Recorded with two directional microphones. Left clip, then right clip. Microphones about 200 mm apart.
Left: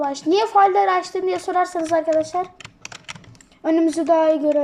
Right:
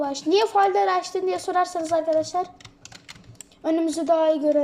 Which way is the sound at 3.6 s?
10° left (ahead or behind).